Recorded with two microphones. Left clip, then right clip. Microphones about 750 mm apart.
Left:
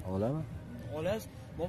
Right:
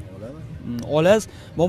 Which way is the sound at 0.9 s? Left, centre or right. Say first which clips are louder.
Right 19 dB; right.